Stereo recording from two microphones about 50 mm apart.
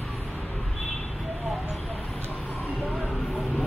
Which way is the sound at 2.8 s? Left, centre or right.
Left.